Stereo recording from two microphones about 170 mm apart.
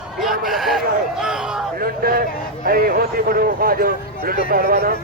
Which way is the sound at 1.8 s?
60° right (ahead or behind).